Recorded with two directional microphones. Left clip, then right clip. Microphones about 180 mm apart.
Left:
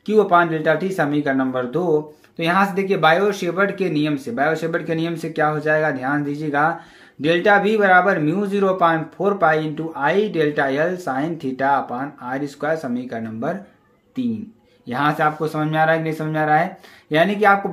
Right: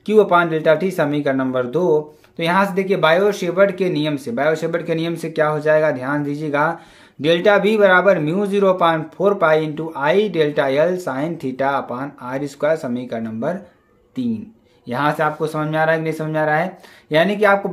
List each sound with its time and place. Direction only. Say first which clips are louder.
0.0 s speech: right 1 dB; 30° right (ahead or behind)
14.9 s speech: even; 25° right (ahead or behind)